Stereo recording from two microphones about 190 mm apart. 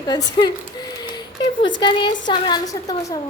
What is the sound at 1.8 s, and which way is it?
A woman's voice, 25° left (ahead or behind).